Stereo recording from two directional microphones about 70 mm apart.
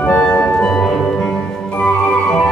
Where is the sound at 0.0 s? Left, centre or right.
Centre.